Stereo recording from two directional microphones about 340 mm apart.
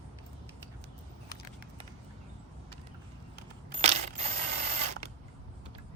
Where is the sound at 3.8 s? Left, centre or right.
Centre.